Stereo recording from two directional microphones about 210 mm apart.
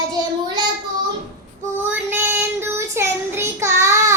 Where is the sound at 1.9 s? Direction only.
10° right (ahead or behind).